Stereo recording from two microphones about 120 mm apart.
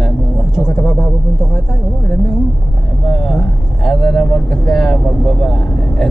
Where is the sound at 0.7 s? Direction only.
20° left (ahead or behind).